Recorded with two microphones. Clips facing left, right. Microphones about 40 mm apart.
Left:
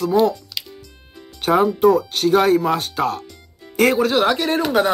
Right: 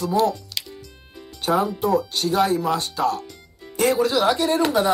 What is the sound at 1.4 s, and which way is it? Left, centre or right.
Speech, left.